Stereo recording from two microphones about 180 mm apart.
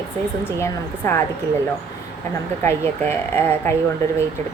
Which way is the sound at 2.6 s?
15° left (ahead or behind).